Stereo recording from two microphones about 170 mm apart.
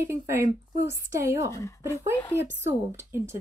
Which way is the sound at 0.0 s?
15° right (ahead or behind).